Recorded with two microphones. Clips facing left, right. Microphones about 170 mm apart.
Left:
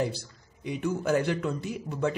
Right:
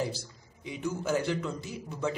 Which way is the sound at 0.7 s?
60° left (ahead or behind).